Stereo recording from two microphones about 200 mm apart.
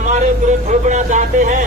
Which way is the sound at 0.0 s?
35° right (ahead or behind).